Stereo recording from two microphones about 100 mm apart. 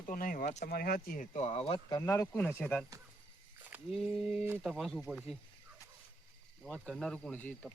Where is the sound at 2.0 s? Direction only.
30° left (ahead or behind).